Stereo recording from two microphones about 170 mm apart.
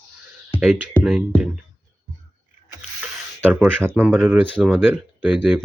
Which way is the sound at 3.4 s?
10° right (ahead or behind).